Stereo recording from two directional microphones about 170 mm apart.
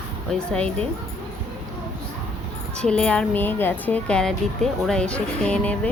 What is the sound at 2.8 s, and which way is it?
A woman's voice, 5° left (ahead or behind).